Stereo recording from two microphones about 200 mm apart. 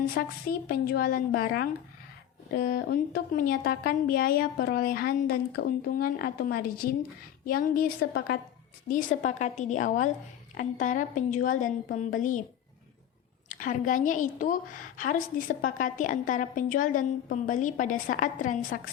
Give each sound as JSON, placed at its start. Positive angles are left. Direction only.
{"t": 0.1, "sound": "a woman's voice", "side_deg": 45}
{"t": 13.5, "sound": "a woman's voice", "side_deg": 40}